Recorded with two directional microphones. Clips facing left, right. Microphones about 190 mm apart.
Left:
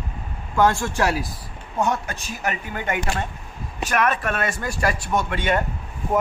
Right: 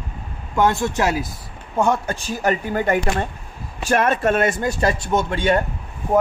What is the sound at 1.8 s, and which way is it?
Speech, 30° right (ahead or behind).